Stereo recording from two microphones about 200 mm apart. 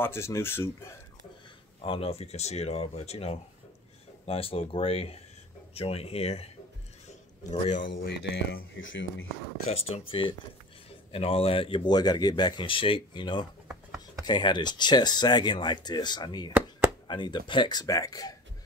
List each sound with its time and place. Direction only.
0.0 s speech: 15° left (ahead or behind)
1.8 s speech: 30° left (ahead or behind)
7.9 s speech: 50° left (ahead or behind)
9.7 s speech: 30° left (ahead or behind)